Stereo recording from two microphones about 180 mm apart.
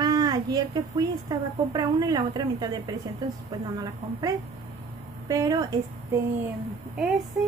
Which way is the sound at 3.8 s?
20° right (ahead or behind).